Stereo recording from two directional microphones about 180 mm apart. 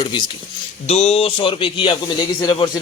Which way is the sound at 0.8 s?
35° left (ahead or behind).